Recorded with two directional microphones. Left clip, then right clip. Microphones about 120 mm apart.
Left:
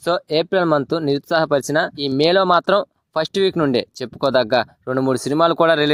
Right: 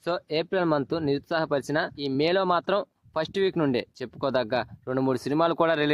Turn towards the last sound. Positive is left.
turn(degrees=35)  # may be behind; listen again after turning